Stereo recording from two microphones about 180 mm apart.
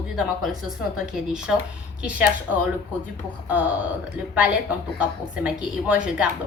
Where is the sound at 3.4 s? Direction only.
10° right (ahead or behind).